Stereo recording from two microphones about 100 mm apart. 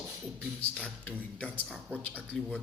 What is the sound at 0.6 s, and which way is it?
A man's voice, 15° left (ahead or behind).